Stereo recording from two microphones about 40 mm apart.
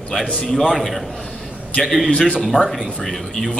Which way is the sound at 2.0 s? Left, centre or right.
Left.